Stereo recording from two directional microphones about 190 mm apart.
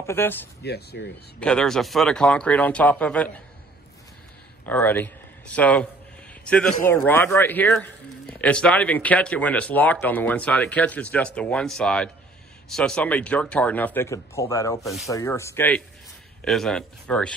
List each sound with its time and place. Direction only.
0.0 s speech: 10° left (ahead or behind)
0.7 s speech: 60° left (ahead or behind)
1.4 s speech: 5° left (ahead or behind)
4.6 s a man's voice: 10° left (ahead or behind)